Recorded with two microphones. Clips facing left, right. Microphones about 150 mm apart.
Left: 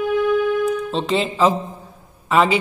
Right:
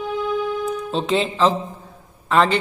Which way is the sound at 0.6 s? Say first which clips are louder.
Left 3 dB; centre (ahead or behind).